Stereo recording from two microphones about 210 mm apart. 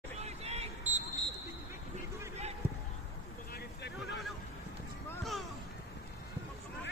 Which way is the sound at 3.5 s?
55° left (ahead or behind).